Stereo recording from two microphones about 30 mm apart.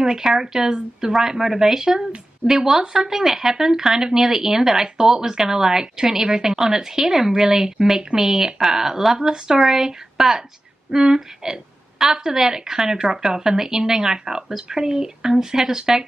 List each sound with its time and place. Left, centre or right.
0.0 s a woman's voice: right